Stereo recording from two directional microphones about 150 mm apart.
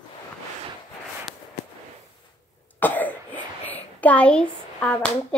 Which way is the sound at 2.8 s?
10° left (ahead or behind).